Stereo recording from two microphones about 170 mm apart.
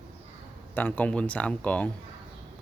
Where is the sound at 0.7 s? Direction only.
10° left (ahead or behind).